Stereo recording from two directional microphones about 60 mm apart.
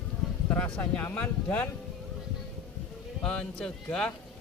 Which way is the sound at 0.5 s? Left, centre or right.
Left.